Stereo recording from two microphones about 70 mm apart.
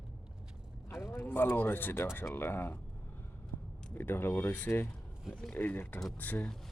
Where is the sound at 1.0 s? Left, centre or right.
Left.